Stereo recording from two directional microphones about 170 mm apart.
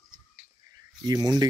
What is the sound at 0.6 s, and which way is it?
Cricket, 20° right (ahead or behind).